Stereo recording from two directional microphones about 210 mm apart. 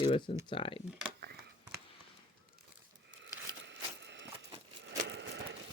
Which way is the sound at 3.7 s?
55° right (ahead or behind).